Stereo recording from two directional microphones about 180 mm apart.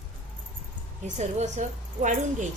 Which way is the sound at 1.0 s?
40° right (ahead or behind).